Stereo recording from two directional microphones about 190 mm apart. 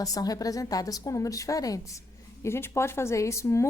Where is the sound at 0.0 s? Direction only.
20° left (ahead or behind).